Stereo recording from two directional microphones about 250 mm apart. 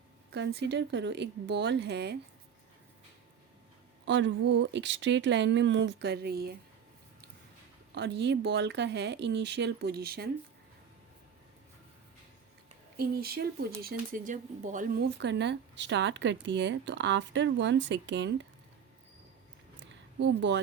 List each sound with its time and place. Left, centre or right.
0.3 s speech: right
4.0 s speech: right
7.9 s speech: right
13.0 s speech: right
19.7 s a sound: right